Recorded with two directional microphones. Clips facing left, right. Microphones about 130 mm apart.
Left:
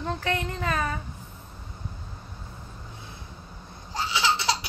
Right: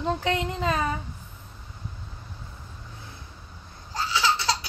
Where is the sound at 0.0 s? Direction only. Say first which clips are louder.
Right 3 dB; 20° right (ahead or behind).